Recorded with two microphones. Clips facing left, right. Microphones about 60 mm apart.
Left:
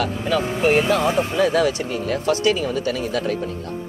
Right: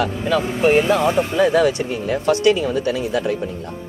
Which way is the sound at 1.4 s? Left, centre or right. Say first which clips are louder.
Right 4 dB; centre.